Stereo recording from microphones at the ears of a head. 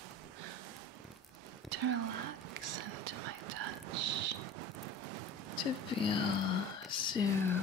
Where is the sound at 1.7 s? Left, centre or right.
Right.